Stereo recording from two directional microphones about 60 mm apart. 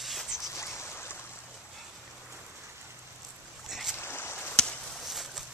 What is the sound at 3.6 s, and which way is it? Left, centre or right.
Boat, centre.